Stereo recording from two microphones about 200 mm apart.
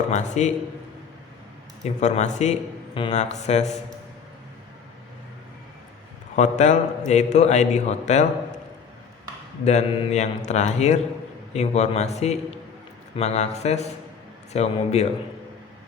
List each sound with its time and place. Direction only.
0.1 s a man's voice: 35° left (ahead or behind)
1.8 s a man's voice: 35° left (ahead or behind)
6.3 s a man's voice: 35° left (ahead or behind)
9.6 s a man's voice: 35° left (ahead or behind)